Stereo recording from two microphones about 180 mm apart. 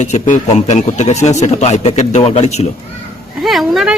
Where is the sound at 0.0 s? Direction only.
40° left (ahead or behind).